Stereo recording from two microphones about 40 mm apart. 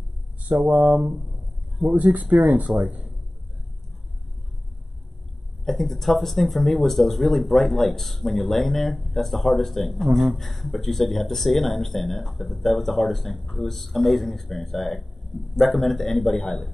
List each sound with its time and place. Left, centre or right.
0.4 s speech: right
2.5 s speech: right
5.7 s speech: centre